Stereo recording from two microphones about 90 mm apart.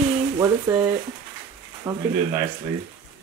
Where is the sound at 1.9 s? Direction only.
40° right (ahead or behind).